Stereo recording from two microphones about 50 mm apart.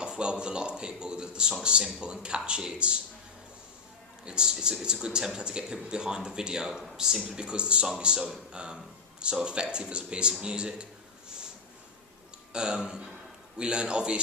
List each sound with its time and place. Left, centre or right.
0.0 s speech: centre
4.3 s speech: centre
12.5 s speech: centre